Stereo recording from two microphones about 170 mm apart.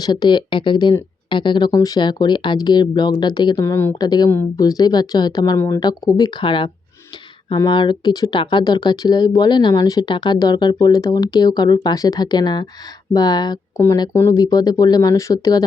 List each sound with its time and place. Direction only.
0.0 s speech: 25° left (ahead or behind)